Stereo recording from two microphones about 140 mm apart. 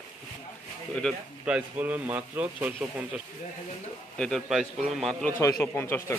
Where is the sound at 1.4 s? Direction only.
10° right (ahead or behind).